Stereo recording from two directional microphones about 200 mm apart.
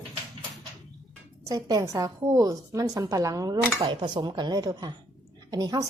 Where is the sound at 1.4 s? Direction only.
15° right (ahead or behind).